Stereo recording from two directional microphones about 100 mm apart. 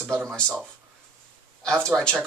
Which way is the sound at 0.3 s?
10° right (ahead or behind).